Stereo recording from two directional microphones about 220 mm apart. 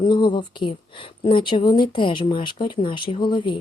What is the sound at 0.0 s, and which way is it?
A woman's voice, 20° left (ahead or behind).